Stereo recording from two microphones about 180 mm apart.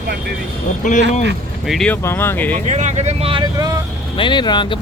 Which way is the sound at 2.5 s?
40° right (ahead or behind).